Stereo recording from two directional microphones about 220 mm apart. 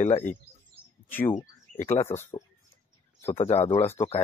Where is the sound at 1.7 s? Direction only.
30° left (ahead or behind).